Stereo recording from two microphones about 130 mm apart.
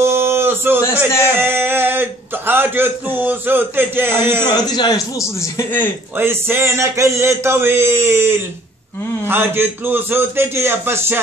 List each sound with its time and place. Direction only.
0.0 s a sound: 20° right (ahead or behind)
0.9 s a man's voice: 15° right (ahead or behind)
4.5 s speech: 30° left (ahead or behind)
6.1 s a man's voice: 20° right (ahead or behind)